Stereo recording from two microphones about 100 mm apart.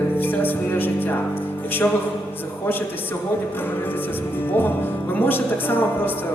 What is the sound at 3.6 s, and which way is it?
Speech, 20° left (ahead or behind).